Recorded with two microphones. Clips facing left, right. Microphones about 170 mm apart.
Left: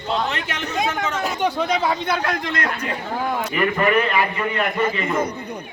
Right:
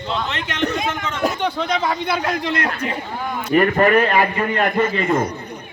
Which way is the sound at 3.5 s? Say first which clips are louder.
Right 7 dB; 45° right (ahead or behind).